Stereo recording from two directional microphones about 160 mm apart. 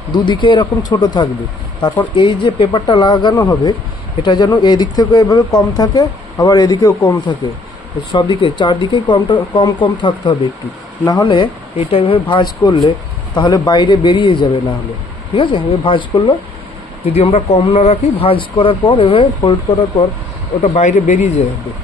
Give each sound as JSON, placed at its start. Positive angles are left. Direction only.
{"t": 0.1, "sound": "speech", "side_deg": 30}